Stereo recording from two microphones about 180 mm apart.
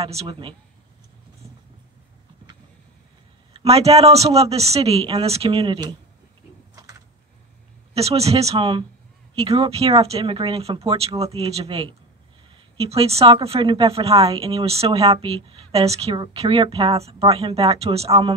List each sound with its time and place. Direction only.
0.0 s a woman's voice: 30° right (ahead or behind)
3.5 s a woman's voice: 35° right (ahead or behind)
6.7 s a sound: 20° right (ahead or behind)
7.9 s a woman's voice: 35° right (ahead or behind)